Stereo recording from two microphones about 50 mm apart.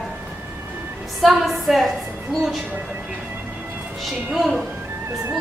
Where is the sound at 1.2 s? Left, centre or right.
Centre.